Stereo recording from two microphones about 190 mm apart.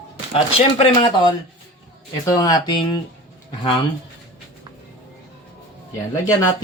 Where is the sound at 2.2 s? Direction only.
20° left (ahead or behind).